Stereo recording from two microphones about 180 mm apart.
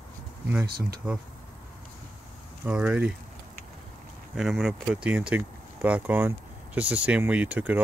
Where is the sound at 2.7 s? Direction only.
5° right (ahead or behind).